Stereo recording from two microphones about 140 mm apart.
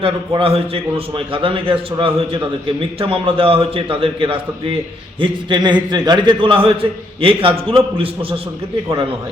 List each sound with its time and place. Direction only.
0.0 s a man's voice: 40° right (ahead or behind)